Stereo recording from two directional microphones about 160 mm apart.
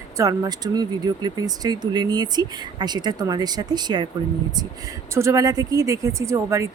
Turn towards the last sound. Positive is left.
turn(degrees=-20)  # may be behind; listen again after turning